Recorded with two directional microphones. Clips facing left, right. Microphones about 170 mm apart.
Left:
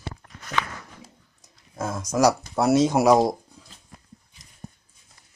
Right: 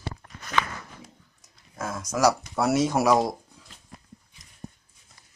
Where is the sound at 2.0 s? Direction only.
15° left (ahead or behind).